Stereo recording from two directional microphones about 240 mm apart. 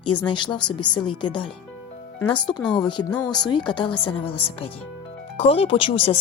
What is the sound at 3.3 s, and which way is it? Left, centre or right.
Speech, centre.